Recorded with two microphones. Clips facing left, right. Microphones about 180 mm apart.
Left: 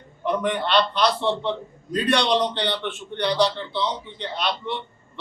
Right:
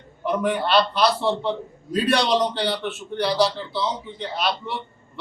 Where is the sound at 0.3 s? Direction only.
5° right (ahead or behind).